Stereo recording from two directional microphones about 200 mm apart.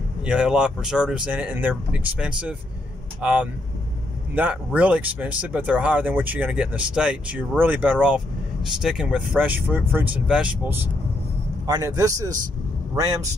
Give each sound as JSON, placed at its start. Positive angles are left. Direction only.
{"t": 0.2, "sound": "speech", "side_deg": -5}